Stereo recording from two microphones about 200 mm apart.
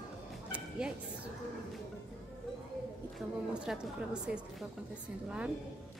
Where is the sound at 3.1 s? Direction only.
5° right (ahead or behind).